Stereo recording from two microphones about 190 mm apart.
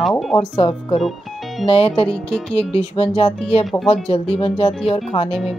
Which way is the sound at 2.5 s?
30° left (ahead or behind).